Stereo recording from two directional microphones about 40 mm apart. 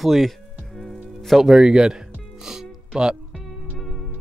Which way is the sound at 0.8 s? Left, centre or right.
Centre.